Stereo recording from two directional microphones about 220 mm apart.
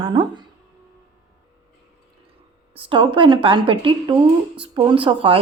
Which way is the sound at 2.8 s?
25° right (ahead or behind).